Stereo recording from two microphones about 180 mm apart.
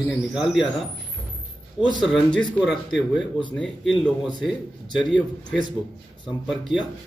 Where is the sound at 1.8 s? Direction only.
25° left (ahead or behind).